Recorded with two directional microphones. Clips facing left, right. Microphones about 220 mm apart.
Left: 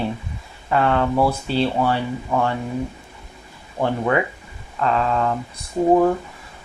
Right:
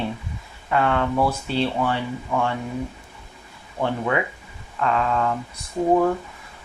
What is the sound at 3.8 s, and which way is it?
Speech, 45° left (ahead or behind).